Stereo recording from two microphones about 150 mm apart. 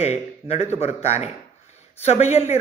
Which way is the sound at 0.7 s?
45° left (ahead or behind).